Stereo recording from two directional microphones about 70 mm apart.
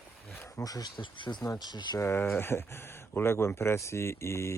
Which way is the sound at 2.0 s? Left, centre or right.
Left.